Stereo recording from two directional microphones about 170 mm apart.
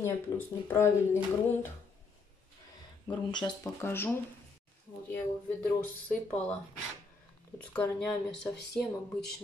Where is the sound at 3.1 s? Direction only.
25° left (ahead or behind).